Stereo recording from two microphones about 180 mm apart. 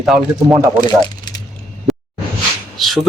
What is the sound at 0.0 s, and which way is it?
Speech, centre (ahead or behind).